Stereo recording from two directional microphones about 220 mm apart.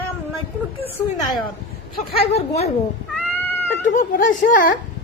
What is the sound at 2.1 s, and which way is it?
Speech, 25° left (ahead or behind).